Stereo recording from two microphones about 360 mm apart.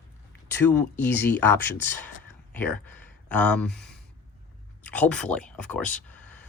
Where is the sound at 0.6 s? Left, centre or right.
Centre.